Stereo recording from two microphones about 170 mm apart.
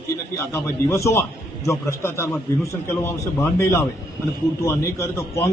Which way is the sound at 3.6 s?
15° left (ahead or behind).